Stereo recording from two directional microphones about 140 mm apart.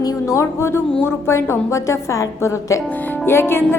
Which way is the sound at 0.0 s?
20° left (ahead or behind).